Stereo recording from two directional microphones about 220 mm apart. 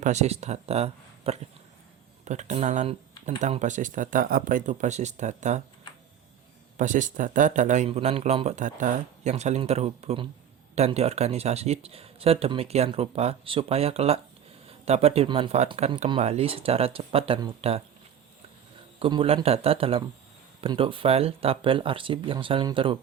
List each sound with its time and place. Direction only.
0.0 s speech: 30° right (ahead or behind)
6.7 s speech: 35° right (ahead or behind)
18.9 s speech: 25° right (ahead or behind)